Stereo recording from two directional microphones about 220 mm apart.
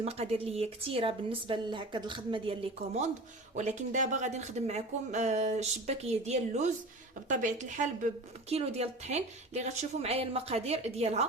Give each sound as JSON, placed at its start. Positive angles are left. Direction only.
{"t": 0.0, "sound": "a woman's voice", "side_deg": -30}